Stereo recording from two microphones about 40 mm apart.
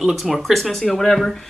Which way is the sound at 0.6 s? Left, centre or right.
Centre.